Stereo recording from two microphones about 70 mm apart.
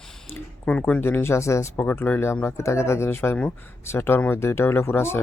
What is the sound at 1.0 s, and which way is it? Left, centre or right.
Speech, left.